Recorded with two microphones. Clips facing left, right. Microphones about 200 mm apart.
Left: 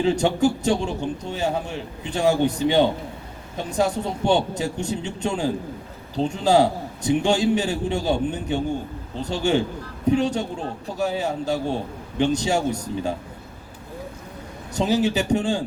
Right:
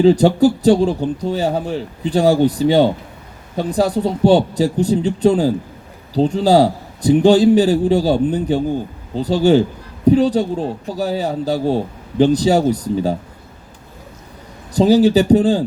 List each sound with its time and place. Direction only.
0.0 s speech: 35° right (ahead or behind)
14.7 s speech: 35° right (ahead or behind)